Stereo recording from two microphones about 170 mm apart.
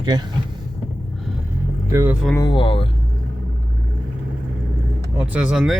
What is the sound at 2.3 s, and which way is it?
Speech, 25° left (ahead or behind).